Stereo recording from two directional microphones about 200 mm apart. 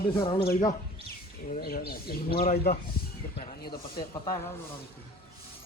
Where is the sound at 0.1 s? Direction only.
25° left (ahead or behind).